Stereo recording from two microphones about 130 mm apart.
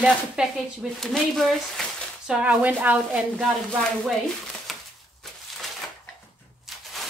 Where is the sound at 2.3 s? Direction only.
10° right (ahead or behind).